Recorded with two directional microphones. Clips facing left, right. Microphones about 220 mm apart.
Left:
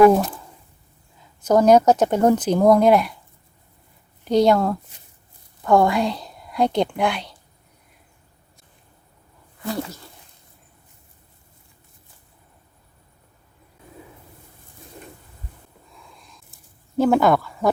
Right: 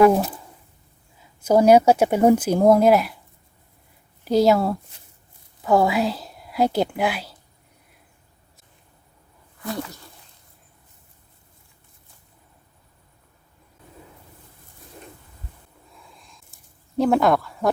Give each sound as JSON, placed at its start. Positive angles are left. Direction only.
{"t": 0.1, "sound": "speech", "side_deg": -10}
{"t": 1.4, "sound": "speech", "side_deg": -10}
{"t": 4.3, "sound": "a woman's voice", "side_deg": -5}
{"t": 9.6, "sound": "speech", "side_deg": 25}
{"t": 16.1, "sound": "a sound", "side_deg": 0}
{"t": 17.0, "sound": "speech", "side_deg": 0}